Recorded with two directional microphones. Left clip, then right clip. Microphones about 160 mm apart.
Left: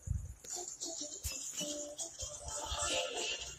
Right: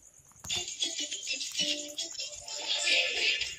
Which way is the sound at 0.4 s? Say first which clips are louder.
Right 12 dB; 5° right (ahead or behind).